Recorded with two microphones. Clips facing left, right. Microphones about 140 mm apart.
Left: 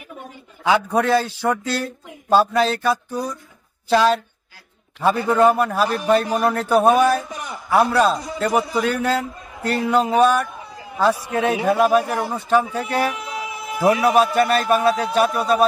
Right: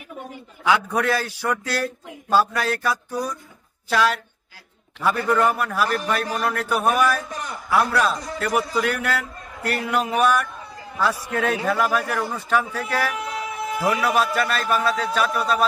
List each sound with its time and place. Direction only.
0.7 s a man's voice: 25° left (ahead or behind)
7.2 s a man's voice: 10° left (ahead or behind)
7.7 s a man's voice: 25° left (ahead or behind)
10.8 s a sound: 25° left (ahead or behind)
11.2 s a man's voice: 20° left (ahead or behind)
12.7 s music: 25° left (ahead or behind)
14.0 s a man's voice: 25° left (ahead or behind)